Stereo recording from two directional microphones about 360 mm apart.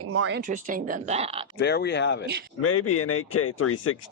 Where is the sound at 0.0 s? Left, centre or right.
Right; by 1.5 s centre.